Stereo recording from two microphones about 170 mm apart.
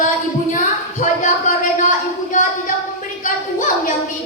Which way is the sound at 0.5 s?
50° left (ahead or behind).